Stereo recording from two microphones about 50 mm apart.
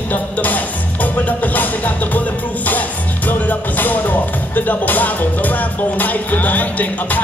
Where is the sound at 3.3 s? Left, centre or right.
Left.